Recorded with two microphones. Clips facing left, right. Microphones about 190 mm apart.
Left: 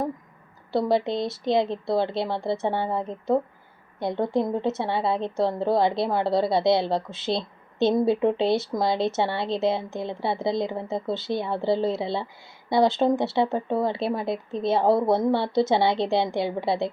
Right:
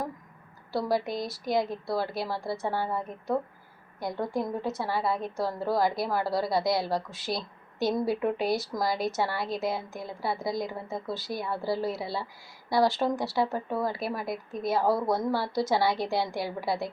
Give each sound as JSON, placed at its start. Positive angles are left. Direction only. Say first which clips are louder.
{"t": 0.7, "sound": "a woman's voice", "louder": "left 5 dB", "side_deg": 25}